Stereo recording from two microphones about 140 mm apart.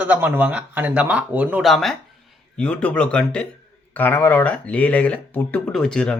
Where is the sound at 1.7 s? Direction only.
Centre (ahead or behind).